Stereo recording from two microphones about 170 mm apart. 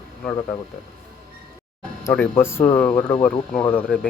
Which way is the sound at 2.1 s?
10° left (ahead or behind).